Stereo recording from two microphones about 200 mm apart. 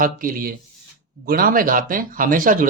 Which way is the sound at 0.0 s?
45° right (ahead or behind).